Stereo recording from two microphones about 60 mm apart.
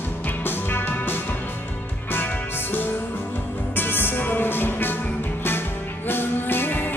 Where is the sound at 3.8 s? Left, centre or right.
Left.